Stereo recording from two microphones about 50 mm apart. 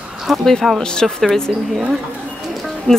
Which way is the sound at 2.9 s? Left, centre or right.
Centre.